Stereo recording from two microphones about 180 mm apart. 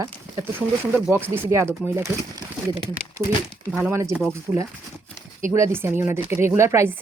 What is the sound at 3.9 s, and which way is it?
Speech, 15° right (ahead or behind).